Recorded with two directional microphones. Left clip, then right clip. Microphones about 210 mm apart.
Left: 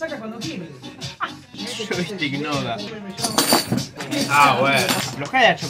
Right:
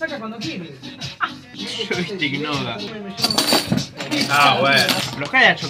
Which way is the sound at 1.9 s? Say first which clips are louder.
Right 2 dB; 10° left (ahead or behind).